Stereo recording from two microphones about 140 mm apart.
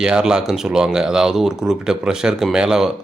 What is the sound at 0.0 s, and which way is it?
Speech, 5° right (ahead or behind).